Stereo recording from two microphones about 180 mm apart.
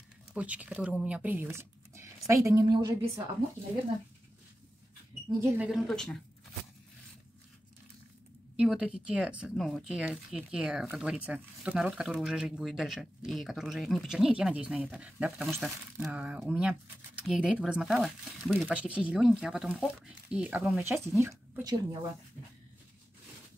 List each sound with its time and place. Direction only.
0.3 s a woman's voice: 5° right (ahead or behind); by 2.9 s 25° right (ahead or behind)
5.4 s speech: 5° right (ahead or behind)
8.5 s speech: 5° right (ahead or behind)